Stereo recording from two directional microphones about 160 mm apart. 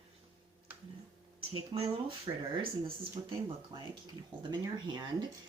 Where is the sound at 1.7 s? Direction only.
35° right (ahead or behind).